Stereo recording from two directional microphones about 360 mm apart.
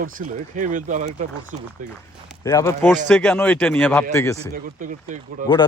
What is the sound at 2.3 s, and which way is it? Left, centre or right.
A man's voice, centre.